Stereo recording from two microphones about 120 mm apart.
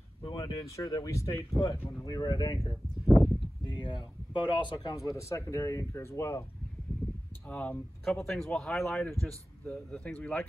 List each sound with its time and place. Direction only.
0.2 s speech: 30° left (ahead or behind)
3.1 s a sound: centre (ahead or behind)
3.6 s speech: 35° left (ahead or behind); by 6.4 s 20° left (ahead or behind)
7.4 s speech: 10° left (ahead or behind)